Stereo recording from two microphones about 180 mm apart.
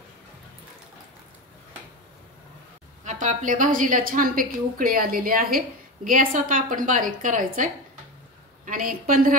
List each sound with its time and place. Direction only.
3.1 s a woman's voice: 45° right (ahead or behind)